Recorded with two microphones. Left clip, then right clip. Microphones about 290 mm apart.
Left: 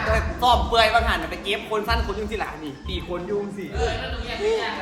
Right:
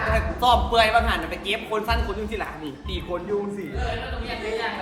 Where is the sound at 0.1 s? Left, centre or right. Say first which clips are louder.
Left 1 dB; centre.